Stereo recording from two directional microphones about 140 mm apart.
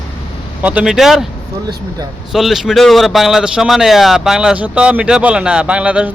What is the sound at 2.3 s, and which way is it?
Speech, centre (ahead or behind).